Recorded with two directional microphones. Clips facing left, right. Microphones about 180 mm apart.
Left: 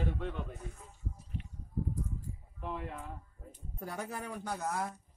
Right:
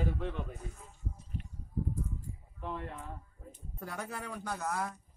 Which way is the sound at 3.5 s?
15° left (ahead or behind).